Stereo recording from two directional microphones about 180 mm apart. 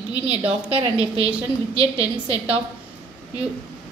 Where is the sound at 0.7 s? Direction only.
30° right (ahead or behind).